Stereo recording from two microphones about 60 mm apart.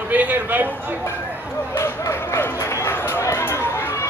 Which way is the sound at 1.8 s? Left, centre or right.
Left.